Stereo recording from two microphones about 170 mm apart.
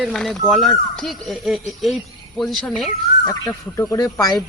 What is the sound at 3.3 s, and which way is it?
Speech, 20° left (ahead or behind).